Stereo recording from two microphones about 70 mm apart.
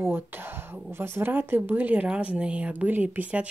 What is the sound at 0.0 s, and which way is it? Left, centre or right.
A woman's voice, right.